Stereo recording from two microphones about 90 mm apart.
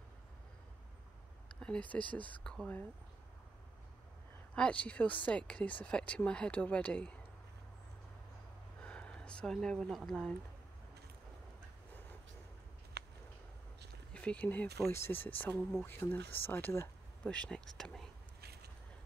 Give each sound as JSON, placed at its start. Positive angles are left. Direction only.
{"t": 1.6, "sound": "speech", "side_deg": 15}
{"t": 4.6, "sound": "speech", "side_deg": 15}
{"t": 8.8, "sound": "speech", "side_deg": 10}
{"t": 14.1, "sound": "speech", "side_deg": 15}
{"t": 14.9, "sound": "speech", "side_deg": 30}
{"t": 17.3, "sound": "speech", "side_deg": 10}